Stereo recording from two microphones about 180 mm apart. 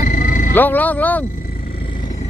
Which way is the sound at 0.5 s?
10° left (ahead or behind).